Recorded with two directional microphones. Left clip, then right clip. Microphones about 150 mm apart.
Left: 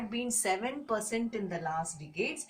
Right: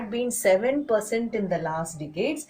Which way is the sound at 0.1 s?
25° left (ahead or behind).